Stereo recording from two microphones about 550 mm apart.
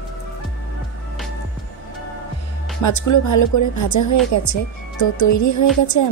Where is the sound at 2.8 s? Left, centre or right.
Left.